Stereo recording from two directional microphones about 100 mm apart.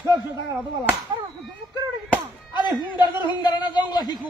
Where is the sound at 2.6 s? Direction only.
45° left (ahead or behind).